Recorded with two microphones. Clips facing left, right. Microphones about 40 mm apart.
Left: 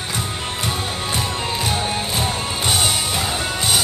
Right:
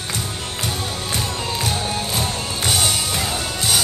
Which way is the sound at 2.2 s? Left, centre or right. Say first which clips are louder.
Left 2 dB; centre.